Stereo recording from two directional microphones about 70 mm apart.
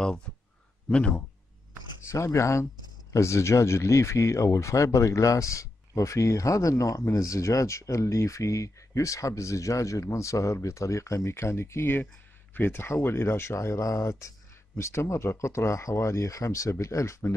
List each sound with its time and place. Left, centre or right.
0.8 s speech: centre
2.0 s speech: left